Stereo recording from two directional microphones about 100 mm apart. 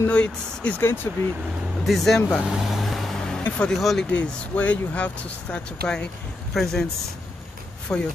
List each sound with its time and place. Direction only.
0.0 s speech: 15° left (ahead or behind)
1.9 s speech: centre (ahead or behind)
2.4 s vehicle: 5° right (ahead or behind)
3.4 s speech: 10° left (ahead or behind)
4.1 s speech: 15° left (ahead or behind)
7.9 s speech: 30° left (ahead or behind)